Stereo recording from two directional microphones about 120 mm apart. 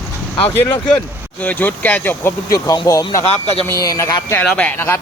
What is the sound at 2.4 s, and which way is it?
Speech, 30° left (ahead or behind).